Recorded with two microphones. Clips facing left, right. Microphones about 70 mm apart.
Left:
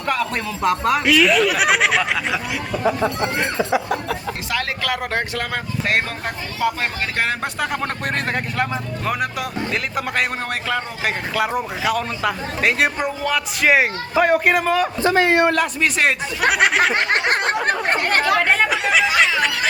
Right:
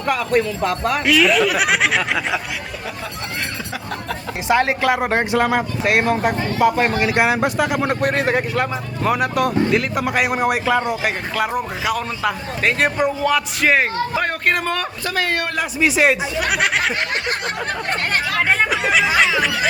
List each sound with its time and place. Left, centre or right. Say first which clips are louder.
0.0 s speech: right 4 dB; centre
4.4 s speech: right 9 dB; right; by 10.2 s centre
10.4 s speech: right 6 dB; centre
15.0 s a man's voice: left 7 dB; left
15.5 s speech: right 1 dB; centre
16.9 s a sound: left 4 dB; left
18.3 s speech: even; centre